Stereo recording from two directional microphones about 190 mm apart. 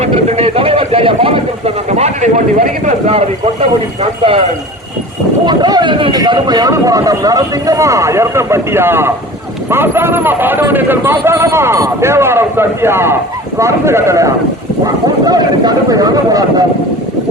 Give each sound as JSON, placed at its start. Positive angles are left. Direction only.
{"t": 0.0, "sound": "speech", "side_deg": -35}
{"t": 5.5, "sound": "speech", "side_deg": -20}